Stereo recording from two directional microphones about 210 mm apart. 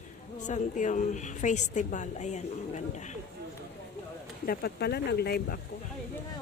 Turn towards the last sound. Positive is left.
turn(degrees=50)  # may be behind; listen again after turning